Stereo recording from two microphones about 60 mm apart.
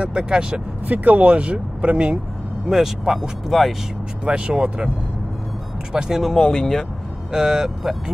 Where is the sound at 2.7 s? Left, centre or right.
Centre.